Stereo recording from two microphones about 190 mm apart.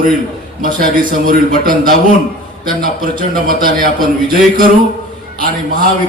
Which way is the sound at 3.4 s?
50° right (ahead or behind).